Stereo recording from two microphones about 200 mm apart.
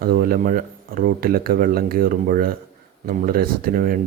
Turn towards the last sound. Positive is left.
turn(degrees=-45)  # may be behind; listen again after turning